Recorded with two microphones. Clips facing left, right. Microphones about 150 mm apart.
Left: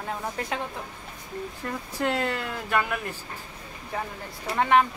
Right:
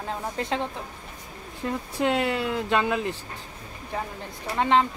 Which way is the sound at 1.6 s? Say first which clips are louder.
Right 4 dB; 15° right (ahead or behind).